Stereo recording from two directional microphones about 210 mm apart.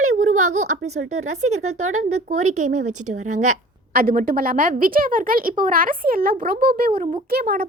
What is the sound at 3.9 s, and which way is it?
A woman's voice, 45° right (ahead or behind).